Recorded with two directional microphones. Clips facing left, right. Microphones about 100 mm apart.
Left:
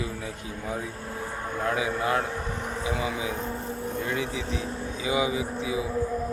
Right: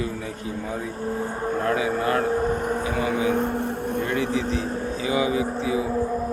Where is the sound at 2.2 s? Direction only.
45° right (ahead or behind).